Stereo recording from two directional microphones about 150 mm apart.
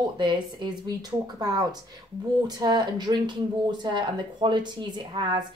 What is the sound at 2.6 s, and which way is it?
A woman's voice, 30° right (ahead or behind).